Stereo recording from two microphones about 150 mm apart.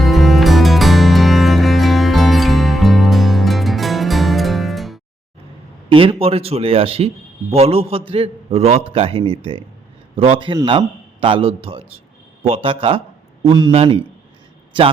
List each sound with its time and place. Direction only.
0.0 s music: centre (ahead or behind)
5.9 s a man's voice: 40° right (ahead or behind)